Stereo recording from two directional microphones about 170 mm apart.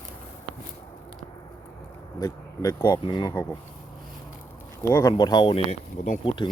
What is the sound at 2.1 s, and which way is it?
Speech, 20° left (ahead or behind).